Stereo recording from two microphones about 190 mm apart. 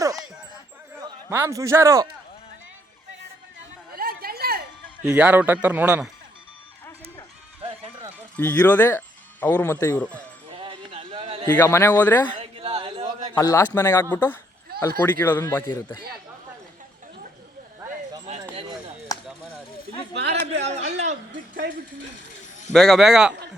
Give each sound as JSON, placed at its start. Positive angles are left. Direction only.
{"t": 1.3, "sound": "speech", "side_deg": -15}
{"t": 3.9, "sound": "chatter", "side_deg": -50}
{"t": 5.0, "sound": "speech", "side_deg": -5}
{"t": 7.6, "sound": "run", "side_deg": -30}
{"t": 8.4, "sound": "speech", "side_deg": 10}
{"t": 10.5, "sound": "a sound", "side_deg": -30}
{"t": 11.5, "sound": "speech", "side_deg": 10}
{"t": 12.4, "sound": "a sound", "side_deg": -30}
{"t": 13.3, "sound": "speech", "side_deg": 15}
{"t": 19.1, "sound": "chop", "side_deg": 20}
{"t": 20.7, "sound": "a sound", "side_deg": -35}
{"t": 22.7, "sound": "speech", "side_deg": 0}